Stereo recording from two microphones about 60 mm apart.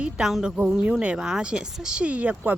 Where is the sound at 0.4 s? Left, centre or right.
Centre.